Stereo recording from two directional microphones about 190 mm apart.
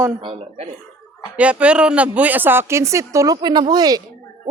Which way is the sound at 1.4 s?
5° right (ahead or behind).